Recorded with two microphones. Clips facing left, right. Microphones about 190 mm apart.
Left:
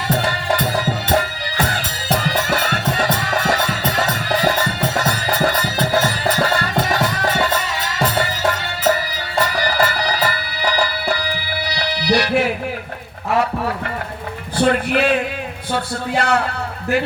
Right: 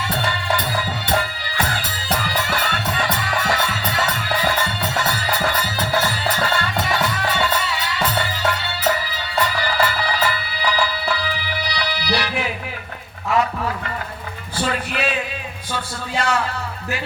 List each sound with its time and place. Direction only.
0.8 s music: 40° left (ahead or behind)
13.3 s a sound: 55° left (ahead or behind)
14.5 s music: 60° left (ahead or behind)
15.7 s a man's voice: 60° left (ahead or behind)